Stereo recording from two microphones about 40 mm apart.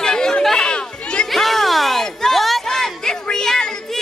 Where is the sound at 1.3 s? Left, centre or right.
Centre.